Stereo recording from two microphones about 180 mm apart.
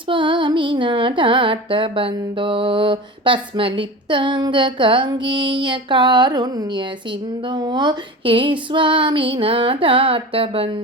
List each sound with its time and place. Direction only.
0.1 s music: 25° right (ahead or behind)